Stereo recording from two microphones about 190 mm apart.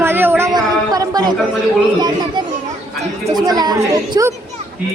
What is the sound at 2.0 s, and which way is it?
A woman's voice, 20° right (ahead or behind).